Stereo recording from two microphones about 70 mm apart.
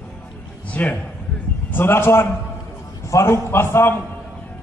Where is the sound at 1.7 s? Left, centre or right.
Left.